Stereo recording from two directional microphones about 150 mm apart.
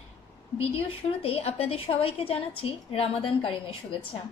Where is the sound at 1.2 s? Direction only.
40° left (ahead or behind).